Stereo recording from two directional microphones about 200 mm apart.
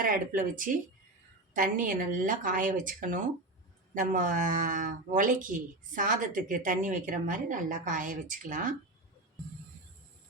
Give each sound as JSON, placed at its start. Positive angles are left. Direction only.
{"t": 0.0, "sound": "speech", "side_deg": -45}